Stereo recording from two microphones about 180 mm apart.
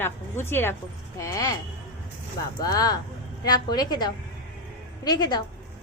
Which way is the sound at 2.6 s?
20° left (ahead or behind).